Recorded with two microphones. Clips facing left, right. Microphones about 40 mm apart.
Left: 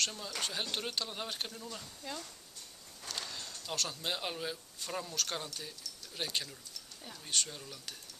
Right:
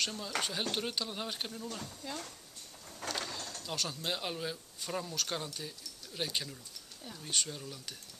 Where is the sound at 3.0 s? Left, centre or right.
Right.